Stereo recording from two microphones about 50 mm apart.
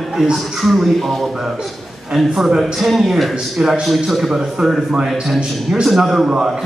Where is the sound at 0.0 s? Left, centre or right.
Centre.